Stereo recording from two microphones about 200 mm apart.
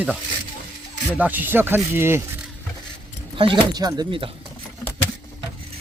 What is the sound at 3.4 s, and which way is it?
Speech, 25° right (ahead or behind).